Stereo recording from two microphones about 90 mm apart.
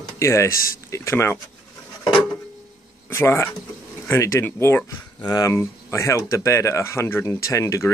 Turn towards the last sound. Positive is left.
turn(degrees=35)  # may be behind; listen again after turning